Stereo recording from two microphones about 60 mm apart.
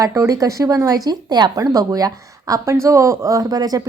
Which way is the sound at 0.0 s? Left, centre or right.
Right.